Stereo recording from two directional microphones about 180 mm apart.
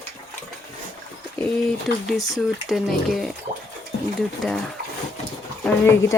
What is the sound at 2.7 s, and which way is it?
Speech, centre (ahead or behind).